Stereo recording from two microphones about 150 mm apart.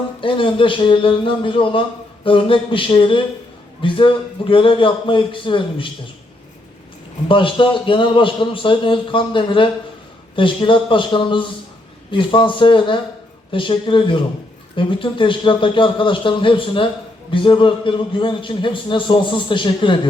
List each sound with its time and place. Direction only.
0.2 s a man's voice: 35° left (ahead or behind)
7.3 s a man's voice: 35° left (ahead or behind)